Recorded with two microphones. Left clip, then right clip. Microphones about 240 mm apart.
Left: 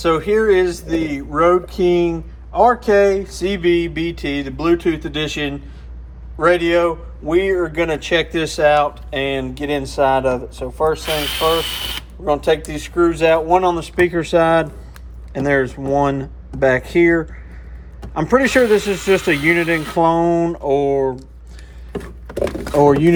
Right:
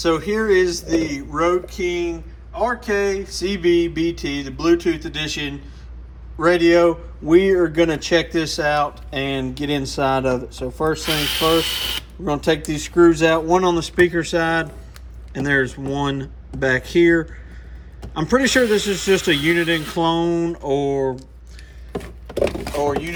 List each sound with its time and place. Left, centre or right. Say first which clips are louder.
0.0 s speech: left 4 dB; centre
6.4 s speech: even; right
7.7 s speech: right 1 dB; right
7.9 s speech: left 1 dB; centre
11.0 s speech: left 1 dB; centre
12.2 s speech: left 4 dB; right
14.0 s speech: left 4 dB; centre
21.9 s a sound: even; centre